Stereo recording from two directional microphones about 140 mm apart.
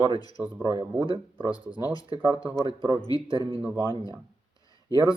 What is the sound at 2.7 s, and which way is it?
Speech, 30° right (ahead or behind).